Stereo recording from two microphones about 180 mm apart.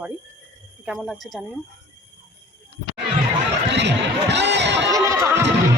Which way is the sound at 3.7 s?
75° right (ahead or behind).